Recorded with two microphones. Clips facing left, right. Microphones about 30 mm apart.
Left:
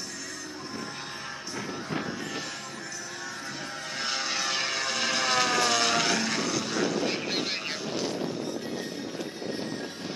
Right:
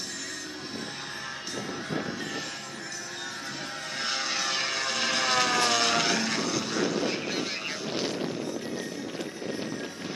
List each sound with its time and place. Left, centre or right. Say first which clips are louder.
4.0 s vehicle: even; centre
7.9 s vehicle: right 1 dB; centre